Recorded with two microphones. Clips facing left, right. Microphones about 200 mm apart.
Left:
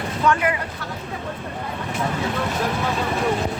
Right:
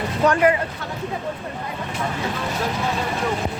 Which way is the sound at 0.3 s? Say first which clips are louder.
Right 3 dB; 35° right (ahead or behind).